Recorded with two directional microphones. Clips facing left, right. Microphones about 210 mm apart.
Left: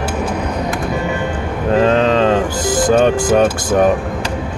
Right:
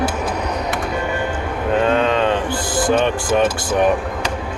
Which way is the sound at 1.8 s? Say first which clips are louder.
Left 4 dB; 35° left (ahead or behind).